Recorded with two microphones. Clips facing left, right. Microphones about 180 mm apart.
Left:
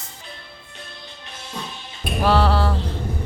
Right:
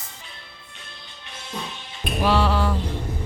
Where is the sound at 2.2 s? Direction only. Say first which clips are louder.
Left 2 dB; 40° left (ahead or behind).